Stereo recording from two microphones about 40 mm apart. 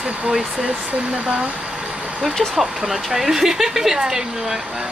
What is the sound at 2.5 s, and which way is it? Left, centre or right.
Speech, centre.